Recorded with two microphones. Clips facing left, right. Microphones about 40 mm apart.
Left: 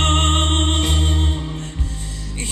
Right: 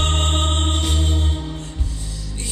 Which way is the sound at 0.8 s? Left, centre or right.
Left.